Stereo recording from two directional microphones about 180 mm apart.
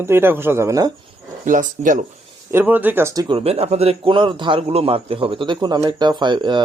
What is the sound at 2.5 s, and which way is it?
Speech, 10° right (ahead or behind).